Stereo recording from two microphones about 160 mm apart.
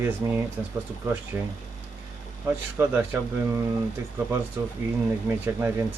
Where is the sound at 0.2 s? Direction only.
20° right (ahead or behind).